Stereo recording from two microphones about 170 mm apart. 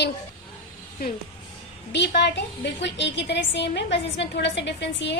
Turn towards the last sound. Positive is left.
turn(degrees=90)